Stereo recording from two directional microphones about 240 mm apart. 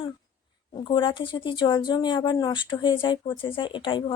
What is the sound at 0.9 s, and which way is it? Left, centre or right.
Speech, centre.